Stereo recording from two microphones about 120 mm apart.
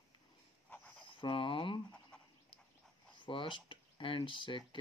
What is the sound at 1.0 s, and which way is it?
Speech, 45° left (ahead or behind).